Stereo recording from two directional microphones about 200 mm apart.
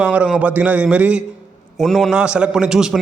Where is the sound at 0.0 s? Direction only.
5° right (ahead or behind).